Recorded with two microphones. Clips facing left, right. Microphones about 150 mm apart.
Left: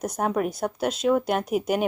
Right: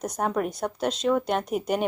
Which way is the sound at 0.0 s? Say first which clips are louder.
Left 2 dB; 5° left (ahead or behind).